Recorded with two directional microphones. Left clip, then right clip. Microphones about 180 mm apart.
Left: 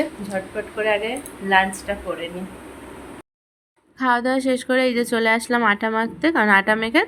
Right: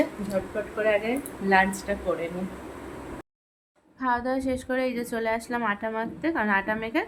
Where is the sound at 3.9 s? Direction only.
20° left (ahead or behind).